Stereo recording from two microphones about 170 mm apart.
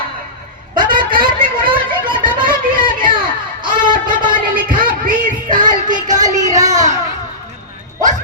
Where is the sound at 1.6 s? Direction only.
30° right (ahead or behind).